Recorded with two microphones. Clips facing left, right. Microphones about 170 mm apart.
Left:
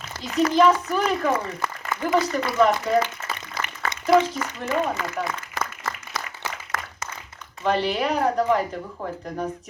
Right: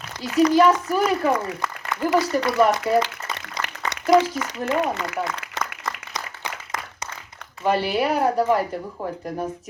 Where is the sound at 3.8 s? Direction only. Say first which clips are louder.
Even; 20° right (ahead or behind).